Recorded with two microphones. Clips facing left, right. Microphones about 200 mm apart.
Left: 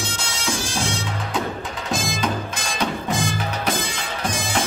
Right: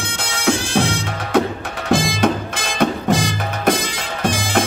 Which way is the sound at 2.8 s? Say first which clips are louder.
Right 7 dB; 90° right.